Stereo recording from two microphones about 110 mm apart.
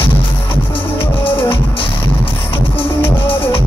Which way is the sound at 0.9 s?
55° left (ahead or behind).